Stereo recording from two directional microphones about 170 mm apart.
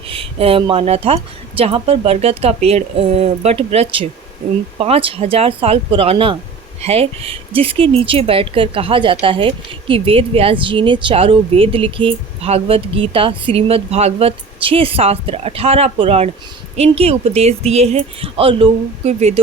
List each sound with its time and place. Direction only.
0.1 s speech: 35° right (ahead or behind)